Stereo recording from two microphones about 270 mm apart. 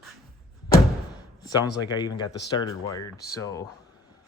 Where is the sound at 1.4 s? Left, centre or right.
Centre.